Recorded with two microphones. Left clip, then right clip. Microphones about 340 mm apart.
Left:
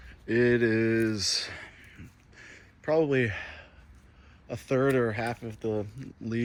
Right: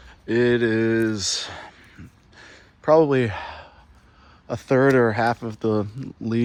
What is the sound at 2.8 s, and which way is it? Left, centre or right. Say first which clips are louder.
Speech: right 8 dB; right.